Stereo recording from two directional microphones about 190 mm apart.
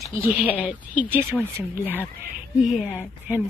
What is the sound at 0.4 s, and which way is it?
Speech, 10° right (ahead or behind).